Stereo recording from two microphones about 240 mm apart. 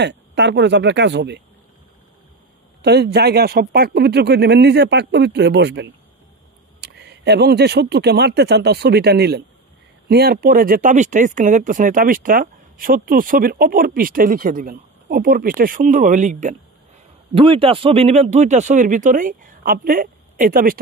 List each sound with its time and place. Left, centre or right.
0.0 s a man's voice: right
2.8 s a man's voice: right